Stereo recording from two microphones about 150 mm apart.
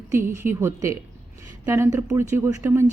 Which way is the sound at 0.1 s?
15° right (ahead or behind).